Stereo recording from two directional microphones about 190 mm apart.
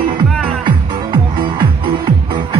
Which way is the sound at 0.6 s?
25° right (ahead or behind).